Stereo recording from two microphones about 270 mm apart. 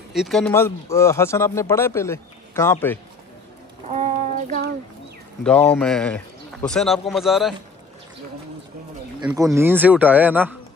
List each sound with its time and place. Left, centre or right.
0.1 s speech: centre
3.9 s a sound: right
5.4 s speech: centre
9.2 s speech: centre